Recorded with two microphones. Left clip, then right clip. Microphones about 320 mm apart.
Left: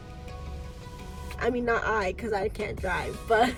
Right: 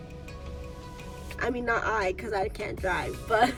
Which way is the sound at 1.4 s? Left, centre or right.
Centre.